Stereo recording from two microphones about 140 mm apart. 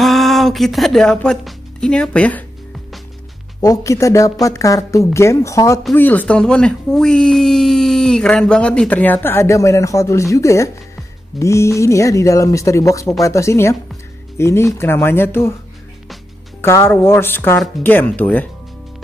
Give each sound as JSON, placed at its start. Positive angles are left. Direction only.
{"t": 0.0, "sound": "speech", "side_deg": 0}
{"t": 3.6, "sound": "a woman's voice", "side_deg": 25}
{"t": 16.6, "sound": "speech", "side_deg": 15}